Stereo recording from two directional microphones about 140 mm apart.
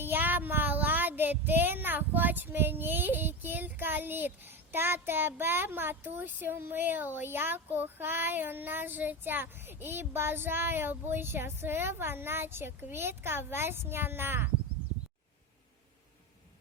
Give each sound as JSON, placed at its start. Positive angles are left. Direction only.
{"t": 0.0, "sound": "child singing", "side_deg": -15}